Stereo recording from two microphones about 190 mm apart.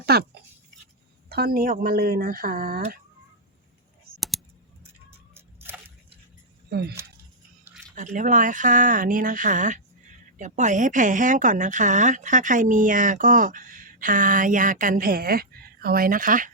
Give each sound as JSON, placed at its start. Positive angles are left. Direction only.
{"t": 0.0, "sound": "speech", "side_deg": -55}
{"t": 1.3, "sound": "speech", "side_deg": -55}
{"t": 6.7, "sound": "speech", "side_deg": -60}
{"t": 7.9, "sound": "speech", "side_deg": -40}